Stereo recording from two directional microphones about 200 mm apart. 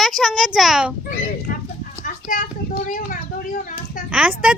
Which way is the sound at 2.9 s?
45° left (ahead or behind).